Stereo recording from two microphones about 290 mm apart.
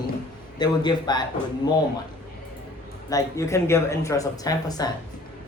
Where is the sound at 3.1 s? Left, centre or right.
Centre.